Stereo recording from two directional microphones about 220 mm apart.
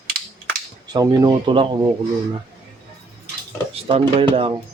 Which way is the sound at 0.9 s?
15° right (ahead or behind).